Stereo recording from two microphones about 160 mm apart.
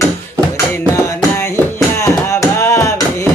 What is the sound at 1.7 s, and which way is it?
Music, 20° left (ahead or behind).